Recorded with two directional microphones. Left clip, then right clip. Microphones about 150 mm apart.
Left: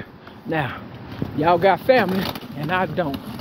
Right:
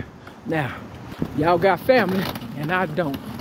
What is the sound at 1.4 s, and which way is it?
Speech, 25° right (ahead or behind).